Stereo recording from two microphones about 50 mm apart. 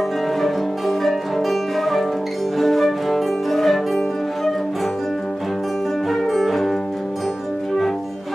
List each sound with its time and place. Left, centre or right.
0.4 s music: centre
6.3 s music: centre